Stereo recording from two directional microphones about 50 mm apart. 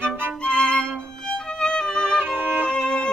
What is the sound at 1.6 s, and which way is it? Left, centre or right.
Music, centre.